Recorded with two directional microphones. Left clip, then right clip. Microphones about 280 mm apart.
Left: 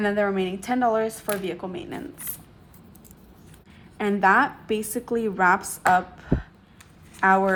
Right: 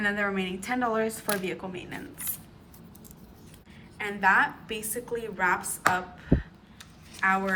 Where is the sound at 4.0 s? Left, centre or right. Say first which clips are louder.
Left 4 dB; centre.